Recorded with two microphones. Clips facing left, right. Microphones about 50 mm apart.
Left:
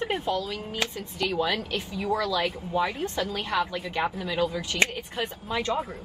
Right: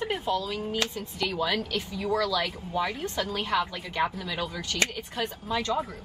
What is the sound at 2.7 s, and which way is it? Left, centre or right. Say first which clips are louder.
Speech: left 2 dB; centre.